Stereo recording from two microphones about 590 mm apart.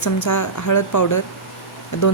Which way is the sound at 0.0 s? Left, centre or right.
Left.